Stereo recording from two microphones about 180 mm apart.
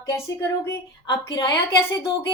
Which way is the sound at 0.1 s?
15° left (ahead or behind).